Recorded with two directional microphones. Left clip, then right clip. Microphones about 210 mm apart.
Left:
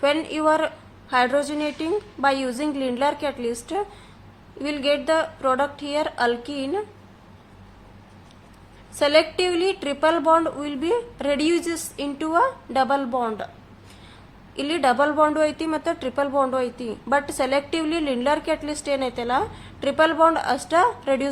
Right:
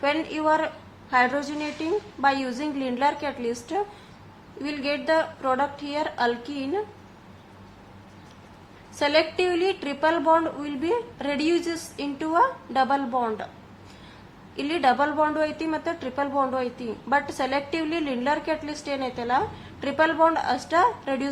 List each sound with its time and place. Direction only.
0.0 s speech: 25° left (ahead or behind)
9.0 s speech: 25° left (ahead or behind)
14.5 s speech: 25° left (ahead or behind)